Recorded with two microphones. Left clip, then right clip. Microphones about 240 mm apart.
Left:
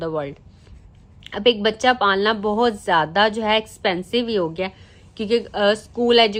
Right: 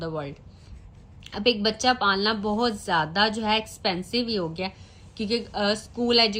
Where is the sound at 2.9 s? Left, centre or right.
Centre.